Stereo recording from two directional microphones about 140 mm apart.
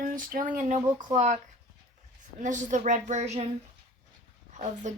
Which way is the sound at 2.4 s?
60° right (ahead or behind).